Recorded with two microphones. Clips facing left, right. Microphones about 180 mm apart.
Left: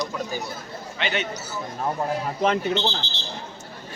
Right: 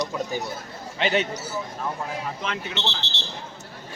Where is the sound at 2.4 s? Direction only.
40° left (ahead or behind).